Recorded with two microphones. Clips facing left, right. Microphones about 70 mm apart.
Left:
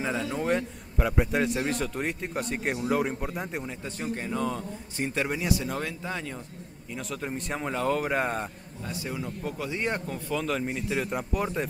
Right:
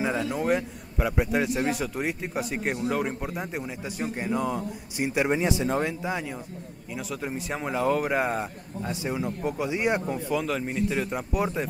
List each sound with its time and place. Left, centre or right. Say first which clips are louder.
0.0 s a man's voice: right 2 dB; centre
8.8 s a man's voice: right 4 dB; right
10.2 s a man's voice: right 2 dB; centre